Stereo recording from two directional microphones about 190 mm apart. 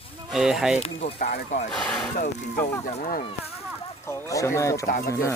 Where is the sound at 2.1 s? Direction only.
45° left (ahead or behind).